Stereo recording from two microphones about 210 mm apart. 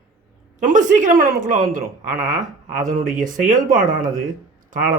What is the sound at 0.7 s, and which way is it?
A man's voice, 35° right (ahead or behind).